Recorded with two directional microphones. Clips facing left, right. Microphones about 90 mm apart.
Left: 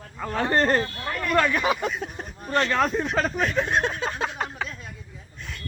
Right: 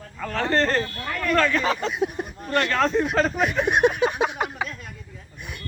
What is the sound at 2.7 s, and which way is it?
Speech, 10° left (ahead or behind).